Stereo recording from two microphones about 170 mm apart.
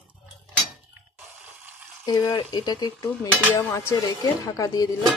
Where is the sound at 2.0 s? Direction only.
20° left (ahead or behind).